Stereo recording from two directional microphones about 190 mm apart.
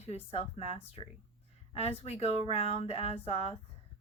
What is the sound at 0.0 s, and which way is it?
Speech, 35° left (ahead or behind).